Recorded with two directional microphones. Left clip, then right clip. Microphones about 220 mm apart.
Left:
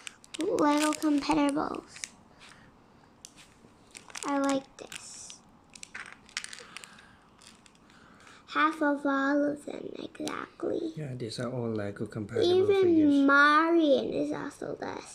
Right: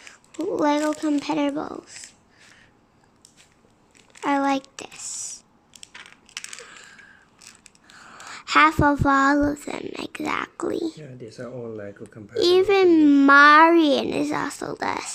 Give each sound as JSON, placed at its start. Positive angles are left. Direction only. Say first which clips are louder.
{"t": 0.1, "sound": "speech", "louder": "right 3 dB", "side_deg": -20}
{"t": 4.2, "sound": "speech", "louder": "right 7 dB", "side_deg": -25}
{"t": 5.9, "sound": "crushing", "louder": "even", "side_deg": -10}
{"t": 7.9, "sound": "speech", "louder": "right 15 dB", "side_deg": -35}
{"t": 11.0, "sound": "speech", "louder": "left 1 dB", "side_deg": 45}
{"t": 12.4, "sound": "a child's voice", "louder": "right 7 dB", "side_deg": -30}